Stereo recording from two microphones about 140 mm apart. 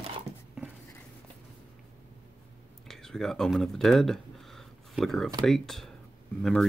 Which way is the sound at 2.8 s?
5° left (ahead or behind).